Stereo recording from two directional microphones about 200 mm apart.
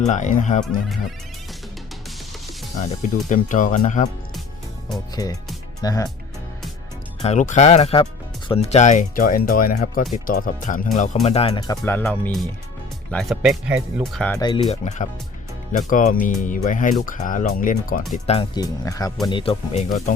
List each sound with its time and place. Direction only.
0.0 s speech: 35° left (ahead or behind)
2.8 s speech: 40° left (ahead or behind)
5.1 s speech: 20° left (ahead or behind)
7.2 s speech: 35° left (ahead or behind); by 14.3 s 5° left (ahead or behind)
14.3 s speech: 20° left (ahead or behind)
14.7 s speech: 35° left (ahead or behind)
18.1 s speech: 30° left (ahead or behind)